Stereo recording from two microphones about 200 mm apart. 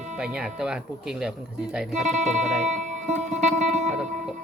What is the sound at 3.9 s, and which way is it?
Music, 5° right (ahead or behind).